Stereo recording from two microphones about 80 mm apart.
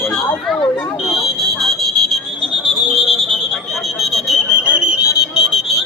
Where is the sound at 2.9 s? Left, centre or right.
Centre.